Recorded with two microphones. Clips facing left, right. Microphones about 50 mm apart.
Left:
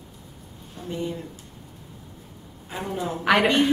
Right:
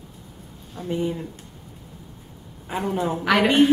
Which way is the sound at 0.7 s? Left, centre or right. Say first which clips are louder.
Right 5 dB; right.